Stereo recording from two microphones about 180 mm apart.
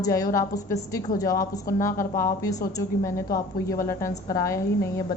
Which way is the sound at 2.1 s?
20° left (ahead or behind).